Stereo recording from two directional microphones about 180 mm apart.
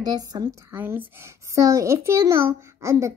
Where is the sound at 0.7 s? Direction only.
10° right (ahead or behind).